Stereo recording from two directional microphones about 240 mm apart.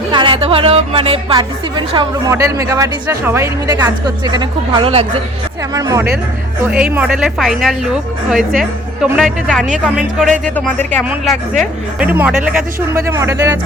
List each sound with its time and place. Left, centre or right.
0.1 s a woman's voice: centre